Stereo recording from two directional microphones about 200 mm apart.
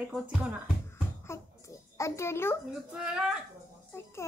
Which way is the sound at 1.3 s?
15° left (ahead or behind).